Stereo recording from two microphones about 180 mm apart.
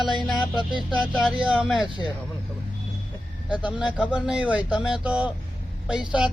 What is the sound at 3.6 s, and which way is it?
Speech, 5° right (ahead or behind).